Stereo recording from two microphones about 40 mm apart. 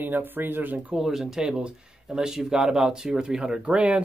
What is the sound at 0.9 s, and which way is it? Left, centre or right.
Speech, centre.